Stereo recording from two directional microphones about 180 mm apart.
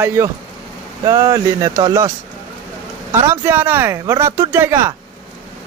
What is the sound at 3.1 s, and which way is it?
A man's voice, 15° right (ahead or behind).